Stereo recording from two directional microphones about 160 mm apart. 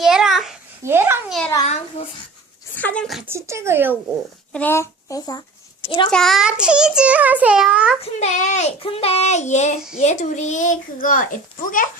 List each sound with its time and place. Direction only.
0.0 s babbling: centre (ahead or behind)
0.9 s a child's voice: 15° right (ahead or behind)
1.6 s a child's voice: 40° left (ahead or behind)
2.7 s a child's voice: 10° left (ahead or behind)
3.2 s speech: 15° right (ahead or behind)
4.5 s a child's voice: 15° left (ahead or behind)
6.1 s a child's voice: 5° left (ahead or behind)
8.0 s a child's voice: 45° left (ahead or behind)